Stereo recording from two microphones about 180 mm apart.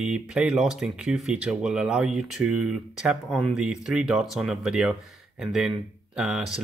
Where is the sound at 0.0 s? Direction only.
5° right (ahead or behind).